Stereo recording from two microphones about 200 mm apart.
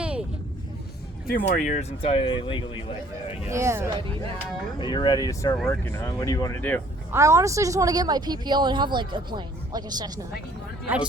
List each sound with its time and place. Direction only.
0.0 s vehicle: 5° right (ahead or behind)
1.5 s speech: 40° left (ahead or behind)
3.5 s speech: 15° right (ahead or behind)
4.8 s speech: 20° left (ahead or behind)
7.1 s speech: 15° right (ahead or behind)